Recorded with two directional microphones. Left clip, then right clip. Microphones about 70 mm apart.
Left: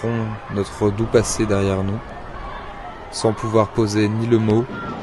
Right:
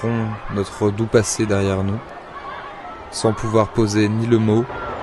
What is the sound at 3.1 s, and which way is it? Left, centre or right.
Speech, centre.